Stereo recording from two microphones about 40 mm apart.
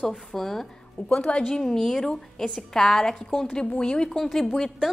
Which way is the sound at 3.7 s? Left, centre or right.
Left.